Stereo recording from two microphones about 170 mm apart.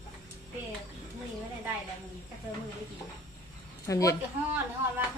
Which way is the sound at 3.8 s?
20° left (ahead or behind).